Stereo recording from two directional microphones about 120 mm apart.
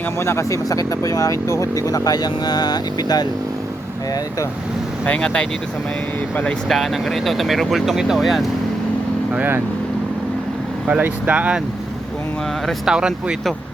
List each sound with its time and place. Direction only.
0.2 s speech: 20° left (ahead or behind)
5.0 s speech: 10° left (ahead or behind)
9.3 s speech: 15° right (ahead or behind)
10.8 s speech: 10° right (ahead or behind)
12.6 s speech: 5° right (ahead or behind)